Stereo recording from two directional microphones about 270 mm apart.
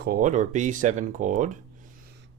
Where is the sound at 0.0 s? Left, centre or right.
Right.